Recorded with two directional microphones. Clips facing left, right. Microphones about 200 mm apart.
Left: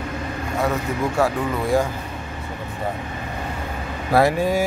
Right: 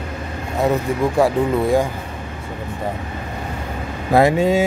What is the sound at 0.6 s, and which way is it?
Speech, 20° right (ahead or behind).